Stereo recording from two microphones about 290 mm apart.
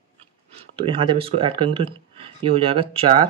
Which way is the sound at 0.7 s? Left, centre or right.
Centre.